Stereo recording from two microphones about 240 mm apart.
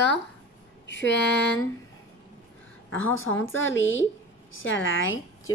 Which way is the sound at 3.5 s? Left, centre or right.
Left.